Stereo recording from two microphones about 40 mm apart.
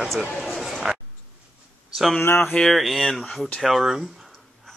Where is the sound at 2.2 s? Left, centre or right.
Left.